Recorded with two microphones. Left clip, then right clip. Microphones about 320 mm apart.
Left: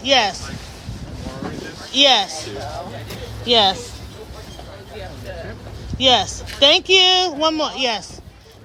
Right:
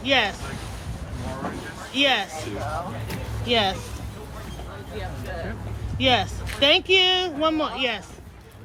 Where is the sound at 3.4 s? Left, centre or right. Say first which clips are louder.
Left 7 dB; centre.